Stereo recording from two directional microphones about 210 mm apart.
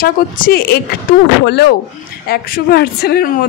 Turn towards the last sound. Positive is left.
turn(degrees=50)  # may be behind; listen again after turning